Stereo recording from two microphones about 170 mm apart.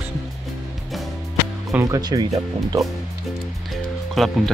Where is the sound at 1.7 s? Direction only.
20° right (ahead or behind).